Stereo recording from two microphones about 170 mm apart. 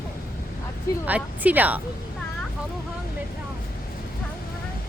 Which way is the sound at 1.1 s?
10° right (ahead or behind).